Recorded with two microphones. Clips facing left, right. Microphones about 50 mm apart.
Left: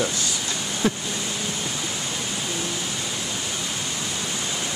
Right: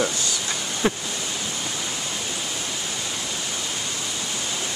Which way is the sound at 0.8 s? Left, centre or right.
Right.